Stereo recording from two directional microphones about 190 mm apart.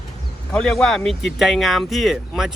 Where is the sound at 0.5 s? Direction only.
5° left (ahead or behind).